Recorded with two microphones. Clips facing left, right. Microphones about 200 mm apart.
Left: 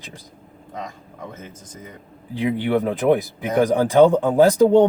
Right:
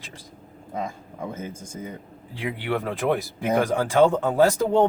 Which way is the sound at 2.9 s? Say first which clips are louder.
Left 6 dB; 20° left (ahead or behind).